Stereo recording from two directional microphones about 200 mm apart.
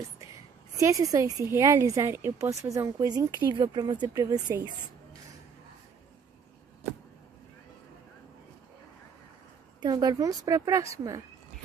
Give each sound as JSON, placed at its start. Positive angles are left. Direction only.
{"t": 0.7, "sound": "a woman's voice", "side_deg": -15}
{"t": 9.8, "sound": "a woman's voice", "side_deg": -20}